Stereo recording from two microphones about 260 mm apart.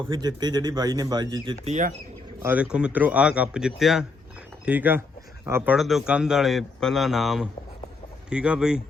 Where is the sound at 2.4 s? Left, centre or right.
Centre.